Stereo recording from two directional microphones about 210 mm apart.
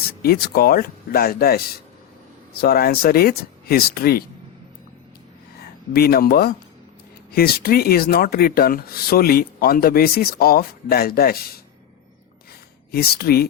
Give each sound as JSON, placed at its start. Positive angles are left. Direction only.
{"t": 0.2, "sound": "speech", "side_deg": 45}
{"t": 5.9, "sound": "speech", "side_deg": 45}
{"t": 12.9, "sound": "speech", "side_deg": 45}